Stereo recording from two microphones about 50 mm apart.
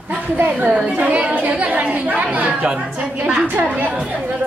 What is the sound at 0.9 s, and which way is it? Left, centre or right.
A woman's voice, right.